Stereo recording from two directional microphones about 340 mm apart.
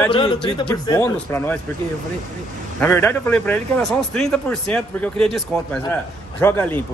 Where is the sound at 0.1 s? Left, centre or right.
Centre.